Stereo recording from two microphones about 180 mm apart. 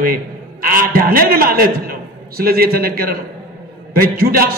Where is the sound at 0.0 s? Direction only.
55° right (ahead or behind).